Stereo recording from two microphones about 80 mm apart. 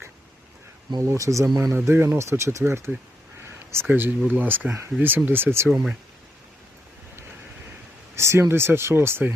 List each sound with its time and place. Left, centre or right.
1.0 s speech: right
1.7 s speech: right
3.4 s a sound: right
3.8 s speech: right
5.6 s speech: centre
8.1 s speech: right